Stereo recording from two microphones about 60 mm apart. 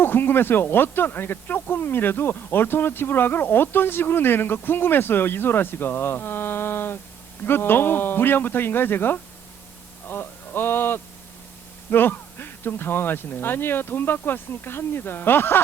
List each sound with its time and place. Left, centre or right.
0.0 s speech: left